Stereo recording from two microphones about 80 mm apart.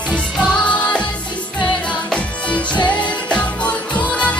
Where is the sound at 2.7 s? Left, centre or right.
Left.